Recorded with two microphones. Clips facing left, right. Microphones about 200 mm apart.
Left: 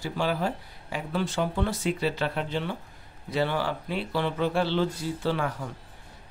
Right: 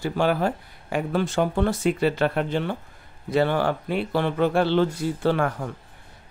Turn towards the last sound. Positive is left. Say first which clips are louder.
# right 5 dB
turn(degrees=-55)  # may be behind; listen again after turning